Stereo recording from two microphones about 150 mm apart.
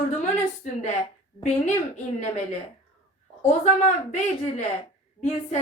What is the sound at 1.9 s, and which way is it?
Speech, 50° left (ahead or behind).